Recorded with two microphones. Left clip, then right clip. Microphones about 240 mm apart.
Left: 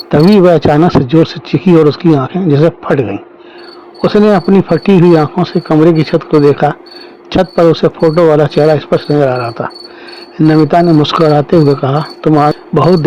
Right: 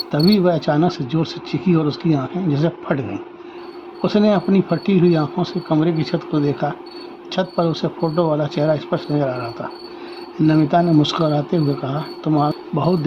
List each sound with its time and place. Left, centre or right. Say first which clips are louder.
0.1 s speech: left 11 dB; left